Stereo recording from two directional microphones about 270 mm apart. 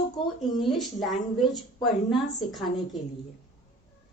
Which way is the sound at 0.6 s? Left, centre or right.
Centre.